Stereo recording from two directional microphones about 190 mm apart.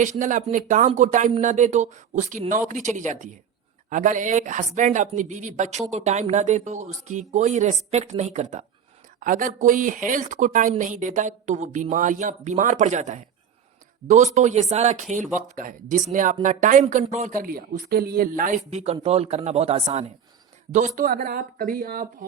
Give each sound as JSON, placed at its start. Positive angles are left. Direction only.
{"t": 0.0, "sound": "a woman's voice", "side_deg": -40}
{"t": 18.7, "sound": "a woman's voice", "side_deg": -35}